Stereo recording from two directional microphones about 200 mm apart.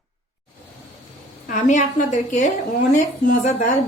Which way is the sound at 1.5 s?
40° left (ahead or behind).